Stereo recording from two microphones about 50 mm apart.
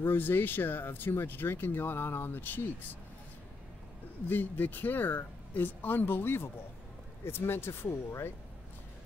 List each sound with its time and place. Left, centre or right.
0.0 s speech: left
4.3 s speech: left